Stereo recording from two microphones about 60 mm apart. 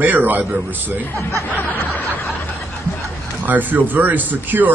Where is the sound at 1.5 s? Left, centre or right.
Left.